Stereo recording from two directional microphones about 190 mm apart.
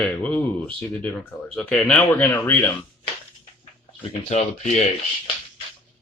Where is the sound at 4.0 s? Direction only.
40° left (ahead or behind).